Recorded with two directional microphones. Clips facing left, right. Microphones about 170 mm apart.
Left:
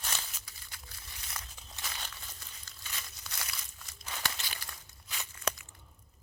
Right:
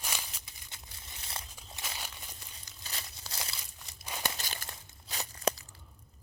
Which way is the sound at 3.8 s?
20° right (ahead or behind).